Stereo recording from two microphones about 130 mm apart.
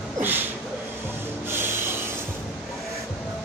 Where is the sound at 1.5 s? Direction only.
15° right (ahead or behind).